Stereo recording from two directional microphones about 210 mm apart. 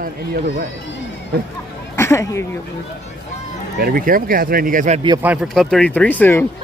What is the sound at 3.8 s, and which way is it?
Speech, 45° right (ahead or behind).